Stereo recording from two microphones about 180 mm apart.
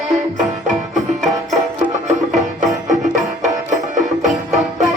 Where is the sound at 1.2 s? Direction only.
Centre (ahead or behind).